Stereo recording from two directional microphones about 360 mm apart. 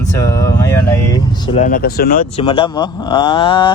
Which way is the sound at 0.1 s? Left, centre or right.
Centre.